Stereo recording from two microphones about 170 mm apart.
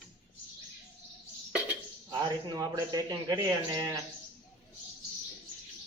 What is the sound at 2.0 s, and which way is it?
A man's voice, 20° right (ahead or behind).